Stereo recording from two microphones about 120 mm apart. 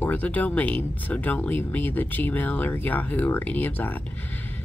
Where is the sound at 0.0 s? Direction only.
15° left (ahead or behind).